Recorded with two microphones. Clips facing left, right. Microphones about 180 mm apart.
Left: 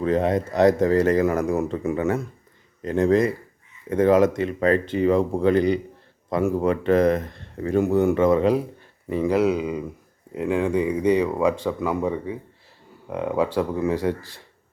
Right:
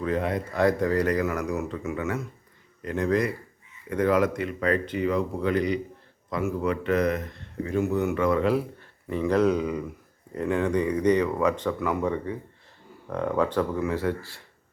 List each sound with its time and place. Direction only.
0.0 s speech: 25° left (ahead or behind)